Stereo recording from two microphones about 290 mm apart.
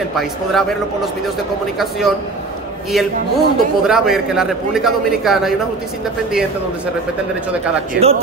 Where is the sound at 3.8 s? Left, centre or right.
Centre.